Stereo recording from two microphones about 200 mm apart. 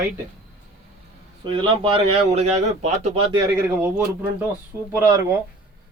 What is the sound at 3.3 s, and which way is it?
Speech, 10° right (ahead or behind).